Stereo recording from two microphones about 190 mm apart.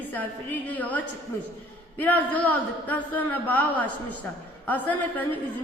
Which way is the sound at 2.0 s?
10° left (ahead or behind).